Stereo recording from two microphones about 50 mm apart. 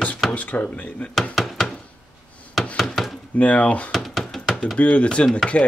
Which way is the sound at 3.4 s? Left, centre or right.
Left.